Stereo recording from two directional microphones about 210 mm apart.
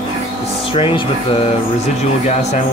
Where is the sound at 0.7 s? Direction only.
25° left (ahead or behind).